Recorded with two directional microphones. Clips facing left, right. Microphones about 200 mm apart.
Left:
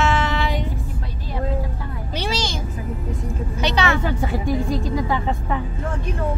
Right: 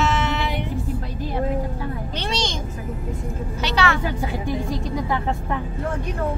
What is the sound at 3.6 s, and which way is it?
Vehicle, 20° left (ahead or behind).